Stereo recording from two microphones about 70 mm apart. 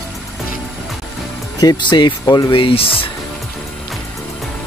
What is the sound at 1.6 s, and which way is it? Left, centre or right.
Speech, left.